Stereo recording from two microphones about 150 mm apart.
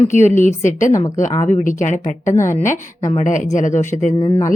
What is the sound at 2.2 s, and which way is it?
Speech, 20° left (ahead or behind).